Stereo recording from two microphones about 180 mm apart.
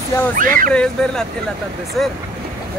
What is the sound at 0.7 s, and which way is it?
Speech, 5° left (ahead or behind).